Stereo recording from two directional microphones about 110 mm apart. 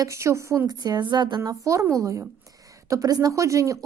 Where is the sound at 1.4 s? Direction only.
30° right (ahead or behind).